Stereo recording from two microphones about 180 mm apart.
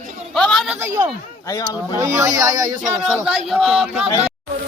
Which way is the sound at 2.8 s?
Centre (ahead or behind).